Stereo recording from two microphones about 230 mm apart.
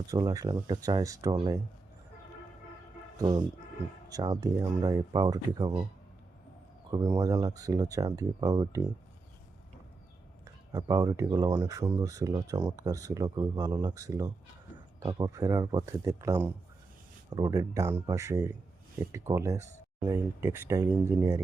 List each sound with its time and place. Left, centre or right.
0.1 s speech: centre
3.2 s speech: centre
6.9 s speech: centre
10.4 s speech: centre